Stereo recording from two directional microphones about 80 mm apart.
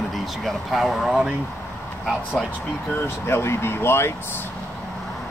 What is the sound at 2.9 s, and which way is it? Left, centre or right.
Speech, left.